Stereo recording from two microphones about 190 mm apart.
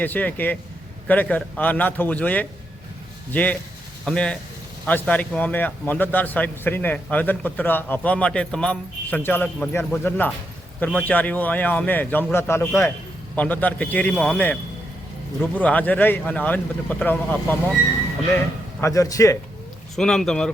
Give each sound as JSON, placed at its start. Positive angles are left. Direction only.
{"t": 0.0, "sound": "a man's voice", "side_deg": 10}
{"t": 15.6, "sound": "a man's voice", "side_deg": 10}
{"t": 20.0, "sound": "speech", "side_deg": 5}